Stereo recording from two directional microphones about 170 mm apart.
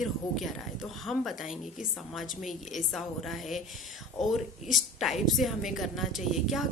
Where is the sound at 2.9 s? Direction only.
Centre (ahead or behind).